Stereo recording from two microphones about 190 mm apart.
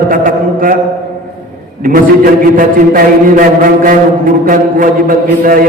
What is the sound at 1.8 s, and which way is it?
A man's voice, 45° right (ahead or behind).